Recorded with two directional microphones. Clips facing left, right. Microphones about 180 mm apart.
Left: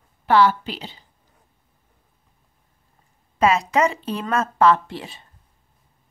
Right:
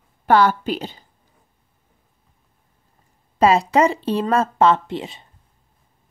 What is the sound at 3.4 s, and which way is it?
Speech, 30° right (ahead or behind).